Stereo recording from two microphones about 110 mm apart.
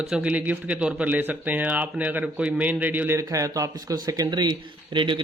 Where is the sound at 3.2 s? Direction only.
30° right (ahead or behind).